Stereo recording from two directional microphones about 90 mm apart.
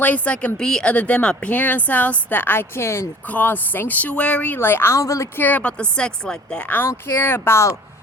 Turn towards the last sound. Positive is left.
turn(degrees=30)  # may be behind; listen again after turning